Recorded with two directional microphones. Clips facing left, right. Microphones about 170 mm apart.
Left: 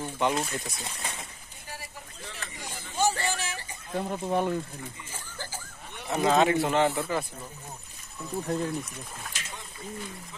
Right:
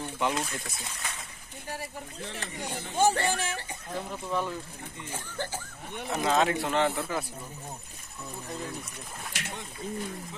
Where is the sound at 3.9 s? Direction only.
55° left (ahead or behind).